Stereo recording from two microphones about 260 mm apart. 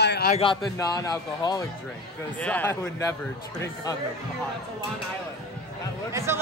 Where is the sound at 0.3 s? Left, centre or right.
Centre.